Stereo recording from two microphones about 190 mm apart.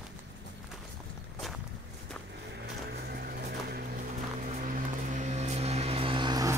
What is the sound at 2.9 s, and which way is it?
Vehicle, 55° right (ahead or behind).